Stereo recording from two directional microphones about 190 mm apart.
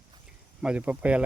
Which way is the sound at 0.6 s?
5° right (ahead or behind).